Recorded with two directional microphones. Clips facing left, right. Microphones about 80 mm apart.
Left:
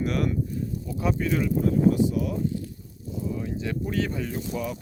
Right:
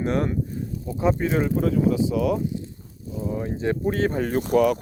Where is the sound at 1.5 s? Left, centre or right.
Right.